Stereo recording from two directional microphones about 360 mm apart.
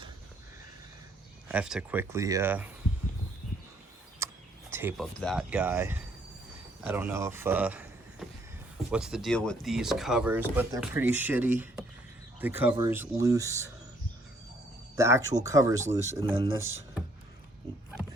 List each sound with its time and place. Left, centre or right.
1.5 s speech: centre
4.2 s a sound: centre
4.7 s speech: centre
8.9 s speech: centre
14.9 s speech: centre